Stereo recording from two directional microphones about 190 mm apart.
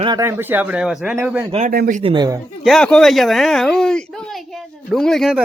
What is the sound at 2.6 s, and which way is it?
Speech, centre (ahead or behind).